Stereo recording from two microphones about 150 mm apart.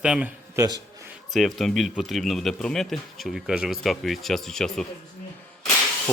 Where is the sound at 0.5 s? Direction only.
25° right (ahead or behind).